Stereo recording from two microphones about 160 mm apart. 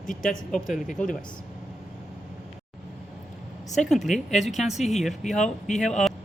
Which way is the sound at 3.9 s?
Centre (ahead or behind).